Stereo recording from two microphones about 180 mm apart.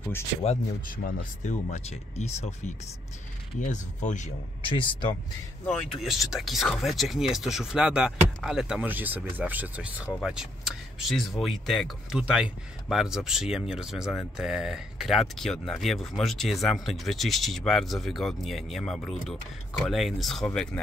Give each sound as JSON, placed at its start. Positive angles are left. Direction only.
{"t": 0.8, "sound": "speech", "side_deg": 45}
{"t": 3.5, "sound": "speech", "side_deg": 45}
{"t": 4.6, "sound": "speech", "side_deg": 30}
{"t": 5.7, "sound": "speech", "side_deg": 0}